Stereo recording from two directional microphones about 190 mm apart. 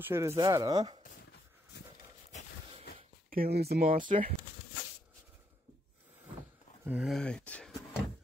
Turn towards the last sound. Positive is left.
turn(degrees=5)  # may be behind; listen again after turning